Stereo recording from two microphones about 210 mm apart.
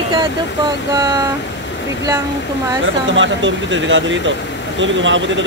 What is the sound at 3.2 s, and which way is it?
Speech, 65° right (ahead or behind).